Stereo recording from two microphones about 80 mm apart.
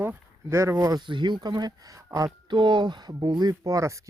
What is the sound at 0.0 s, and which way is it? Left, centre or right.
Speech, right.